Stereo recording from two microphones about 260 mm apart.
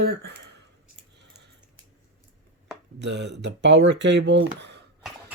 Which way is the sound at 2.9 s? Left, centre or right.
Right.